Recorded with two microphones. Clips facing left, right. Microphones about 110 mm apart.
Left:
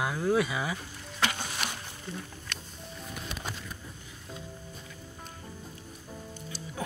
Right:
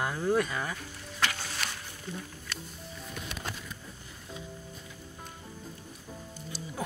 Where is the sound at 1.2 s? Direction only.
20° left (ahead or behind).